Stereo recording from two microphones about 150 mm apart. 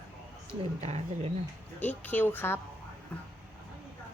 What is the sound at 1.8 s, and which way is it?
Speech, 10° left (ahead or behind).